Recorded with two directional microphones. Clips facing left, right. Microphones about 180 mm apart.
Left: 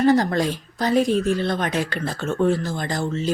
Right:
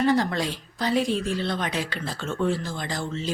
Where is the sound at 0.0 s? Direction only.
45° left (ahead or behind).